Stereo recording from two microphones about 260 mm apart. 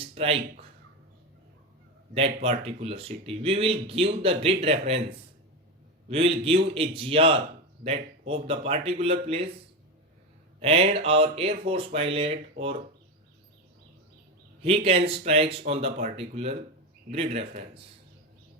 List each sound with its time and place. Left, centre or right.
0.0 s speech: right
2.1 s speech: right
6.1 s speech: right
10.6 s speech: right
14.6 s speech: right